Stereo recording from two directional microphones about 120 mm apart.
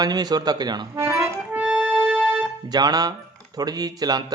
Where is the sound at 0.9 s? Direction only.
25° right (ahead or behind).